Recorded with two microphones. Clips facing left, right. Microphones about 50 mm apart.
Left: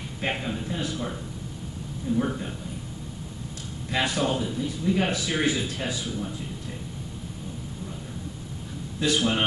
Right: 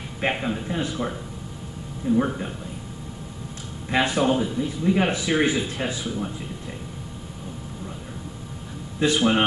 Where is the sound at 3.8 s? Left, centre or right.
Centre.